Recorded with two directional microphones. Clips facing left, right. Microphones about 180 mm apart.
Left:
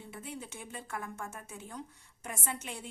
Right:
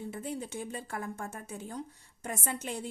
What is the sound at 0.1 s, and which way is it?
A woman's voice, 40° right (ahead or behind).